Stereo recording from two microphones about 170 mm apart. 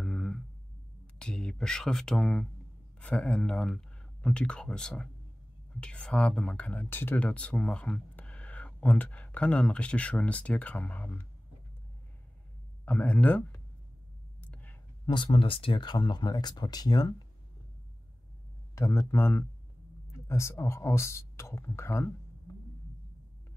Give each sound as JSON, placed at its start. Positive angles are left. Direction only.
{"t": 0.0, "sound": "a sound", "side_deg": 5}
{"t": 1.2, "sound": "speech", "side_deg": 5}
{"t": 12.8, "sound": "speech", "side_deg": 10}
{"t": 14.4, "sound": "clicking", "side_deg": 10}
{"t": 15.0, "sound": "speech", "side_deg": 30}
{"t": 18.8, "sound": "speech", "side_deg": 20}